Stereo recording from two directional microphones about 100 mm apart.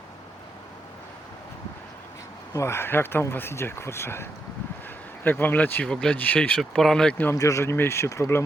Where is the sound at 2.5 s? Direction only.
25° left (ahead or behind).